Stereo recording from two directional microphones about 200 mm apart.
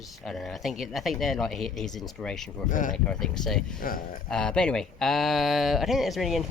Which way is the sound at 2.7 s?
40° left (ahead or behind).